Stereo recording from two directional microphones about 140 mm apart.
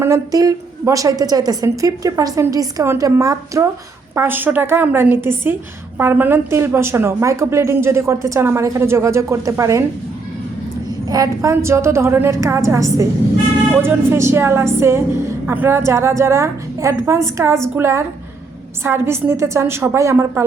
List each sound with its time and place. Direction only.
0.0 s a woman's voice: 25° right (ahead or behind)
11.1 s a woman's voice: 25° right (ahead or behind)